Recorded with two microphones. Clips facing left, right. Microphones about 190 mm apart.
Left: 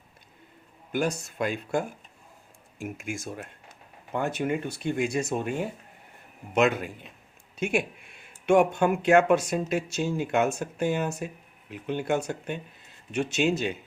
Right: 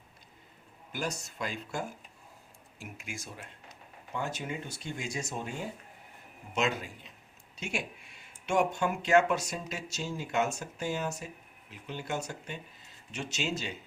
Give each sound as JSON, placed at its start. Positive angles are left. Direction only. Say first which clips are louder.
{"t": 0.9, "sound": "speech", "louder": "left 9 dB", "side_deg": 55}